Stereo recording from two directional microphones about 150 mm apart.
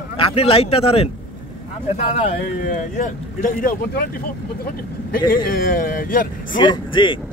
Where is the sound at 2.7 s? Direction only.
60° left (ahead or behind).